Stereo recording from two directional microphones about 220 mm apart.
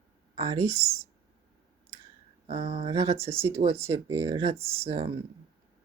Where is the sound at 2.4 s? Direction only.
25° right (ahead or behind).